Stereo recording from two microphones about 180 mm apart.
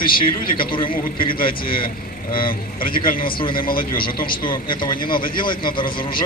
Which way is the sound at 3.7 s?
55° left (ahead or behind).